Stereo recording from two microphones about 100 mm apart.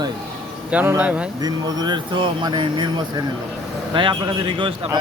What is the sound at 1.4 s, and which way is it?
A man's voice, 40° right (ahead or behind).